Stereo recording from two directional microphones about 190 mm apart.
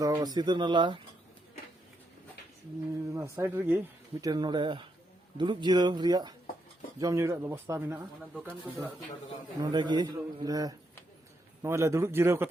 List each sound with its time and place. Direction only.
0.0 s speech: 20° right (ahead or behind)
3.1 s speech: 15° right (ahead or behind)
9.6 s speech: 25° right (ahead or behind)